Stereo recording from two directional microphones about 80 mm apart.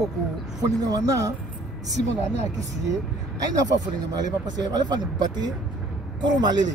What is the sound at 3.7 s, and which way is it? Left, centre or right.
Speech, right.